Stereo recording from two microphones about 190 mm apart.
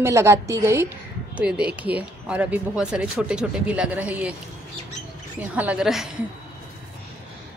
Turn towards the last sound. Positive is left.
turn(degrees=-5)  # may be behind; listen again after turning